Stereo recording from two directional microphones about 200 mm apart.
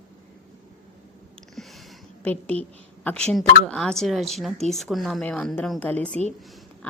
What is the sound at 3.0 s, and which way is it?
A woman's voice, 5° left (ahead or behind).